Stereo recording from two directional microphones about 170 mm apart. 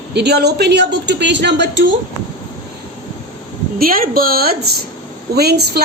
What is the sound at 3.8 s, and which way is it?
A woman's voice, 55° right (ahead or behind).